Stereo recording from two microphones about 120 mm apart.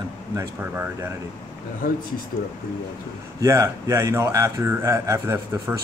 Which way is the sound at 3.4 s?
25° right (ahead or behind).